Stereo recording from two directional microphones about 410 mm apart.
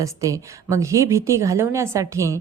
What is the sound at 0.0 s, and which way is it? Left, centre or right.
A woman's voice, centre.